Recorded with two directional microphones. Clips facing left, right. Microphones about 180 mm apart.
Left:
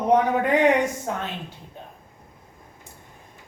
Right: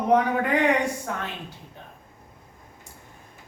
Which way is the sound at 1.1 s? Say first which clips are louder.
Left 3 dB; 20° left (ahead or behind).